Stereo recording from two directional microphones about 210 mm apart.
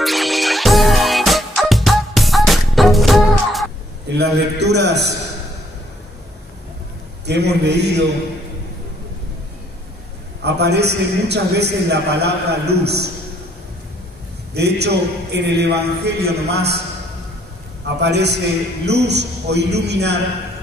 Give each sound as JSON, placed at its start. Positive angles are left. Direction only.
{"t": 0.0, "sound": "music", "side_deg": 0}
{"t": 4.2, "sound": "a man's voice", "side_deg": -50}
{"t": 7.2, "sound": "a man's voice", "side_deg": -55}
{"t": 10.4, "sound": "a man's voice", "side_deg": -50}
{"t": 14.5, "sound": "a man's voice", "side_deg": -50}
{"t": 17.8, "sound": "a man's voice", "side_deg": -55}